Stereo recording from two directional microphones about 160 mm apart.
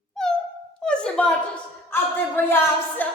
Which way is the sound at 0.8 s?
5° left (ahead or behind).